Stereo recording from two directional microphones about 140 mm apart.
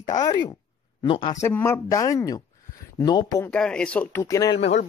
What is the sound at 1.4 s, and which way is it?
Speech, 15° left (ahead or behind).